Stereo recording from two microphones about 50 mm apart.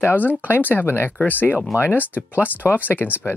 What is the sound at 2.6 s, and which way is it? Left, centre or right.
Speech, left.